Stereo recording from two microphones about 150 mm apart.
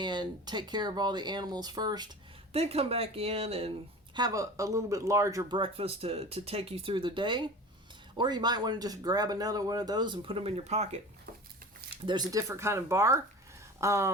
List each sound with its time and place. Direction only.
0.0 s speech: 30° right (ahead or behind)
2.5 s speech: 40° right (ahead or behind)
4.1 s speech: 25° right (ahead or behind)
5.5 s speech: 35° right (ahead or behind)
12.0 s speech: 30° right (ahead or behind)
13.7 s a sound: 20° right (ahead or behind)